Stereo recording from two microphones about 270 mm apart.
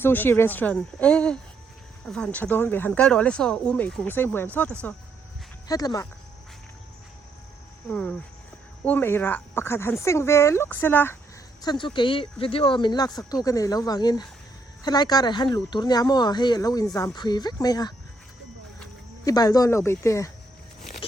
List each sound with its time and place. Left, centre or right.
0.0 s speech: centre
7.9 s speech: centre